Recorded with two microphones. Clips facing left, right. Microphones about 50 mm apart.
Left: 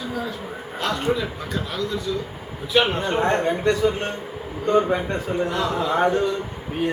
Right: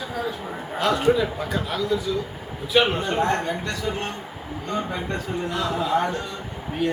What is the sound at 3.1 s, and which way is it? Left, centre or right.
A man's voice, left.